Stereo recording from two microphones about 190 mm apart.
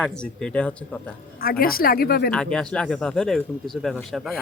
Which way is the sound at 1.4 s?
50° left (ahead or behind).